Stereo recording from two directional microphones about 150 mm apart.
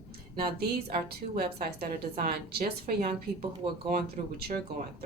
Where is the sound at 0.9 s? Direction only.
90° right; by 3.4 s 75° right (ahead or behind).